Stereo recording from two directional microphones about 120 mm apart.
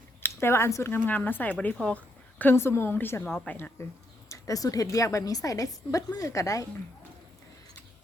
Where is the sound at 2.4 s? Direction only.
20° left (ahead or behind).